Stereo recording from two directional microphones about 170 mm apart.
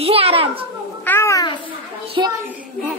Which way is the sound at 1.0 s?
15° left (ahead or behind).